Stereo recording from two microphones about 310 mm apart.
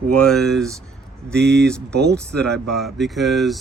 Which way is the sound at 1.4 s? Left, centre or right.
Right.